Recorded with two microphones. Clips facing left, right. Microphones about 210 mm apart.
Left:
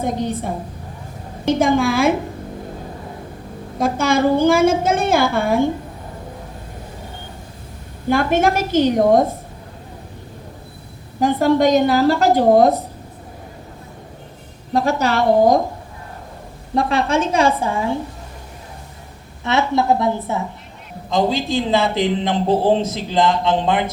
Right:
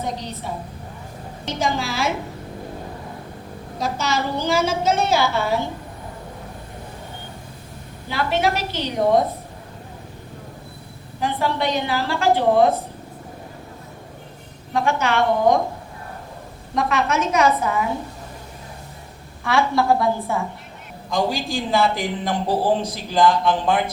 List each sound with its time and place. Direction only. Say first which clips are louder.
0.0 s a woman's voice: left 7 dB; 50° left (ahead or behind)
3.8 s a woman's voice: left 7 dB; 50° left (ahead or behind)
8.0 s a woman's voice: left 6 dB; 50° left (ahead or behind)
11.2 s a woman's voice: left 8 dB; 45° left (ahead or behind)
14.7 s a woman's voice: left 3 dB; 35° left (ahead or behind)
16.7 s speech: left 3 dB; 30° left (ahead or behind)
19.5 s speech: left 2 dB; 20° left (ahead or behind)